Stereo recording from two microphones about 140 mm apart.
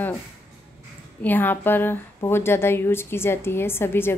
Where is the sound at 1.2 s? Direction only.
15° left (ahead or behind).